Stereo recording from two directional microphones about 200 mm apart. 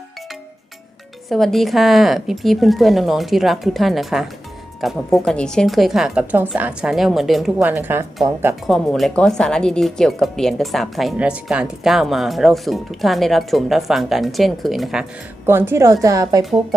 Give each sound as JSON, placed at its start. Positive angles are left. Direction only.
{"t": 1.3, "sound": "a woman's voice", "side_deg": 0}
{"t": 8.6, "sound": "speech", "side_deg": 0}
{"t": 15.4, "sound": "a woman's voice", "side_deg": -10}